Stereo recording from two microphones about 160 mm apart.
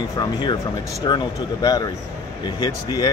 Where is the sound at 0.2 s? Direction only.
30° left (ahead or behind).